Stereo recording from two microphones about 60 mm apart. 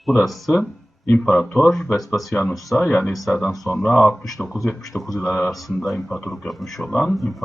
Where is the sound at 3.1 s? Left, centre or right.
Centre.